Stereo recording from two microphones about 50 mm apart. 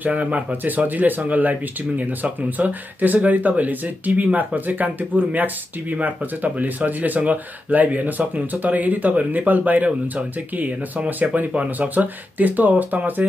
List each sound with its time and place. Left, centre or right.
0.0 s speech: right